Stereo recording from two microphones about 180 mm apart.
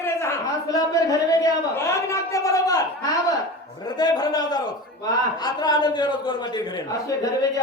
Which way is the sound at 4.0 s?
20° left (ahead or behind).